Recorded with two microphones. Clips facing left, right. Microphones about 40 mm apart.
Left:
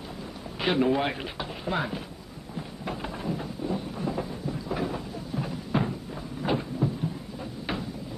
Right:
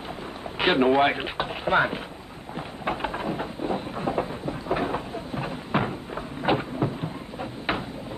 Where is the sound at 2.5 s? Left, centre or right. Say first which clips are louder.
Right 5 dB; right.